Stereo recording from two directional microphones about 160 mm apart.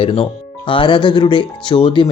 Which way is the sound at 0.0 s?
35° left (ahead or behind).